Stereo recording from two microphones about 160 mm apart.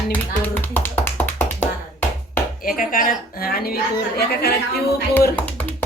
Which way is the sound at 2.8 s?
60° left (ahead or behind).